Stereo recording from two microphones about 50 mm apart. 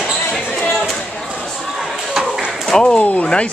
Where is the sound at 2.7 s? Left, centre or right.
Centre.